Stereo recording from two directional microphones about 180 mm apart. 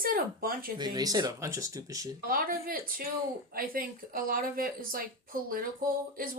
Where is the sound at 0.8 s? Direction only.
20° right (ahead or behind).